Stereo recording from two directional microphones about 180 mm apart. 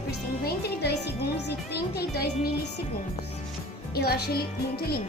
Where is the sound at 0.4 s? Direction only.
65° left (ahead or behind).